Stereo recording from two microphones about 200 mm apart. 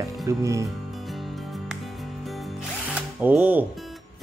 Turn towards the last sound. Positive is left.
turn(degrees=-10)  # may be behind; listen again after turning